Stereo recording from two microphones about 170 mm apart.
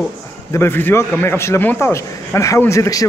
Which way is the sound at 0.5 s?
15° left (ahead or behind).